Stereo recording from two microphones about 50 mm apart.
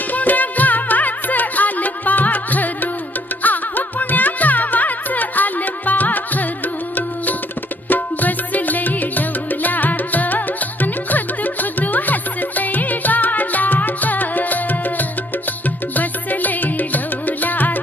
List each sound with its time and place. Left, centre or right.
0.1 s music: left
7.9 s music: left